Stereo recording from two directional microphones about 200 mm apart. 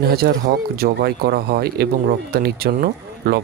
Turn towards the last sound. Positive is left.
turn(degrees=-50)  # may be behind; listen again after turning